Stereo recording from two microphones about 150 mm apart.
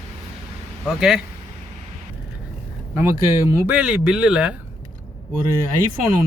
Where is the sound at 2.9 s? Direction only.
15° right (ahead or behind).